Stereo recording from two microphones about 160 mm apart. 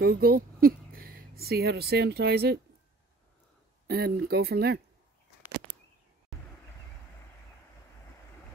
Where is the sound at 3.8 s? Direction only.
75° right (ahead or behind).